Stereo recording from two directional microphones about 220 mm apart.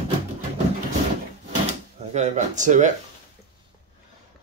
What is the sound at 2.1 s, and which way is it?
Speech, 30° right (ahead or behind).